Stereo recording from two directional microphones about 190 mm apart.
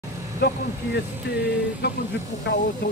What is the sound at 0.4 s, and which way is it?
Vehicle, 60° left (ahead or behind).